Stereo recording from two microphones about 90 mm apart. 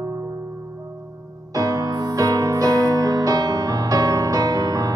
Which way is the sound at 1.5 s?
40° right (ahead or behind).